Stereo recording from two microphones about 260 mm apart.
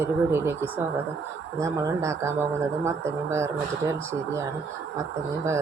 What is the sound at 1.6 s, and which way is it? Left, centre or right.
Speech, centre.